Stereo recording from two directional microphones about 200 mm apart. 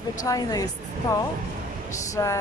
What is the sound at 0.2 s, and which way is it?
Speech, 20° left (ahead or behind).